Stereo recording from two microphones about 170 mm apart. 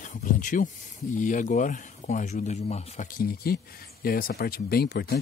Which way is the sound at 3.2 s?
65° left (ahead or behind).